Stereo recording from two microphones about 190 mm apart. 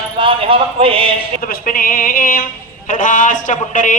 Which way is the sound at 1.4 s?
50° left (ahead or behind).